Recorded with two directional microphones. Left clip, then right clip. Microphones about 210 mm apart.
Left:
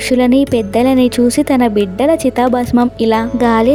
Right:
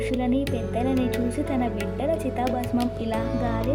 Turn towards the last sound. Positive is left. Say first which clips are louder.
# left 14 dB
turn(degrees=45)  # may be behind; listen again after turning